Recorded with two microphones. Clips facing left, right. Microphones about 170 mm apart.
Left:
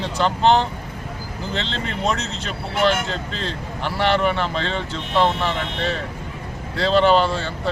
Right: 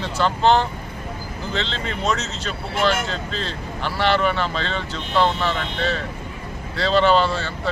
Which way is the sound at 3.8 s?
15° left (ahead or behind).